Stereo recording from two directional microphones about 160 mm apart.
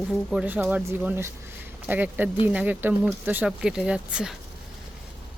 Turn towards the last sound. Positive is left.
turn(degrees=-5)  # may be behind; listen again after turning